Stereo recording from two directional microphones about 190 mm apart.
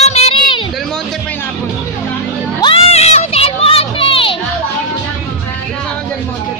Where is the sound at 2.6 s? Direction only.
30° left (ahead or behind).